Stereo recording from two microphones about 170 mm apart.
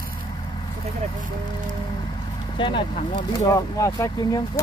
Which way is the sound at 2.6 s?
30° left (ahead or behind).